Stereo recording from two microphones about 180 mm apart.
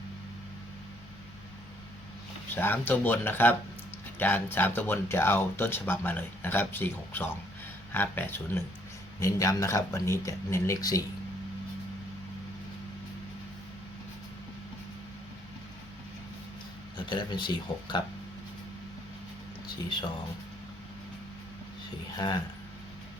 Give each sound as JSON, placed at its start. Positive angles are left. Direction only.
{"t": 2.6, "sound": "speech", "side_deg": 10}
{"t": 17.1, "sound": "speech", "side_deg": 25}